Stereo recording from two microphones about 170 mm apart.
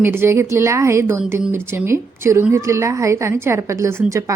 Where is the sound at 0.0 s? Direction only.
15° right (ahead or behind).